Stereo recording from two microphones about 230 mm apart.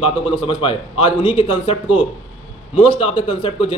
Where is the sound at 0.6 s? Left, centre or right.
Left.